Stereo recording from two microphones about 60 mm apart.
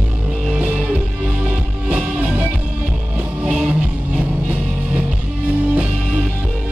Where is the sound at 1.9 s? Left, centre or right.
Right.